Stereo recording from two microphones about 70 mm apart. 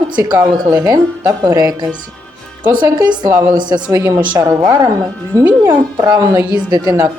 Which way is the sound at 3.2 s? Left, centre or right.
Right.